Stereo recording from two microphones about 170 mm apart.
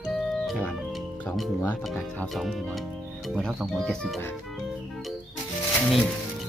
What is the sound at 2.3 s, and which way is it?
Speech, centre (ahead or behind).